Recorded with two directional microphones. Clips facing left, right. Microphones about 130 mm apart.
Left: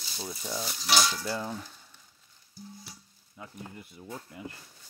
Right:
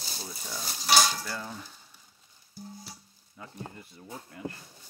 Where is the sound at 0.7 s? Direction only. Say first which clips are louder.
Right 3 dB; 40° right (ahead or behind).